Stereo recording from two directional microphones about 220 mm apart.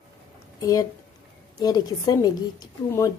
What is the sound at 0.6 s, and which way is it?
A woman's voice, 15° left (ahead or behind).